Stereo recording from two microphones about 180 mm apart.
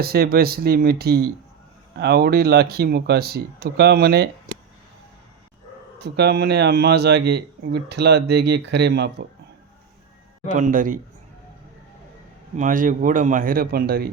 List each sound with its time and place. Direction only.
0.0 s speech: 60° right (ahead or behind)
6.0 s speech: 65° right (ahead or behind)
10.5 s a man's voice: 45° right (ahead or behind)
12.5 s a man's voice: 45° right (ahead or behind)